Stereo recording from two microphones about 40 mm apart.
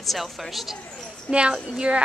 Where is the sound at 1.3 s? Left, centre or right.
Right.